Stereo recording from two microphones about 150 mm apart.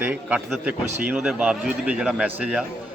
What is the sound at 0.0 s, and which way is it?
A man's voice, 10° right (ahead or behind).